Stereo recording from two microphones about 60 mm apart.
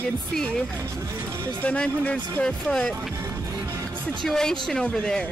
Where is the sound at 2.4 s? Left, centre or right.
Centre.